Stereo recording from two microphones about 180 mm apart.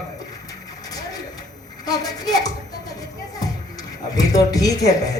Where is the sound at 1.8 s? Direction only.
20° left (ahead or behind).